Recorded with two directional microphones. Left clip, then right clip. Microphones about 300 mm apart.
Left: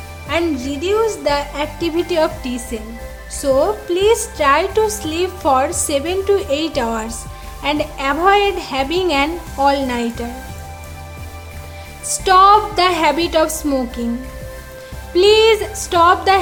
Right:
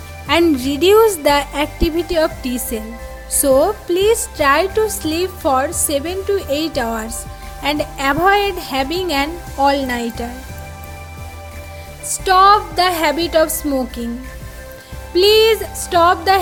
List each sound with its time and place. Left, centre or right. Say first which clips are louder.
0.3 s a woman's voice: right 5 dB; right
12.0 s a woman's voice: left 1 dB; centre
15.1 s a woman's voice: even; centre